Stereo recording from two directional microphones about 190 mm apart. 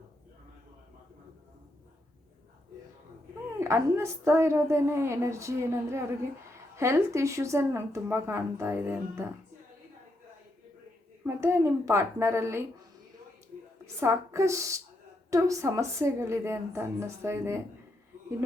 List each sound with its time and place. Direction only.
3.6 s a woman's voice: 15° right (ahead or behind)
11.3 s a woman's voice: 15° right (ahead or behind)
14.0 s a woman's voice: 15° right (ahead or behind)